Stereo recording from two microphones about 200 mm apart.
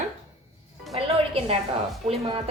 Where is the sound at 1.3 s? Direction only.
30° right (ahead or behind).